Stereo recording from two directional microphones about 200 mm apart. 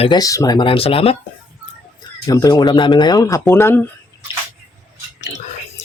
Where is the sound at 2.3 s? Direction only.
20° left (ahead or behind).